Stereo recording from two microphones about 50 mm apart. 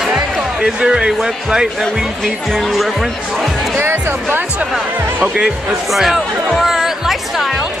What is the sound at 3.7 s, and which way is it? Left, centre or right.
Speech, right.